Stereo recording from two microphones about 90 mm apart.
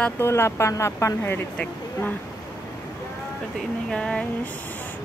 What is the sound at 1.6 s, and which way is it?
Speech, 20° left (ahead or behind).